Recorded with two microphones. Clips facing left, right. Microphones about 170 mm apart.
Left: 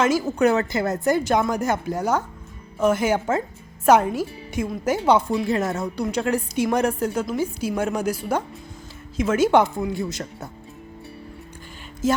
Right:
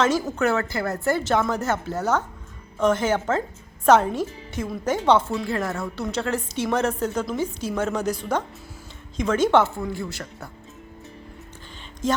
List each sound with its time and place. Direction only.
0.0 s a woman's voice: 10° left (ahead or behind)
12.0 s a woman's voice: 5° left (ahead or behind)